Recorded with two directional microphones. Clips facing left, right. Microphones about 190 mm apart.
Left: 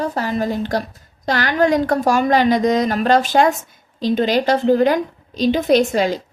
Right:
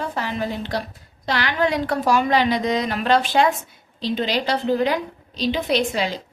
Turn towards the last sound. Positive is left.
turn(degrees=45)  # may be behind; listen again after turning